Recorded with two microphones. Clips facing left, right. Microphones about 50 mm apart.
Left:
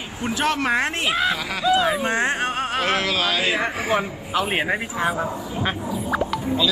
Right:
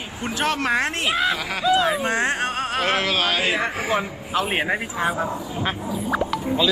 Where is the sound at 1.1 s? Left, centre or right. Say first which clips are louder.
Even; centre.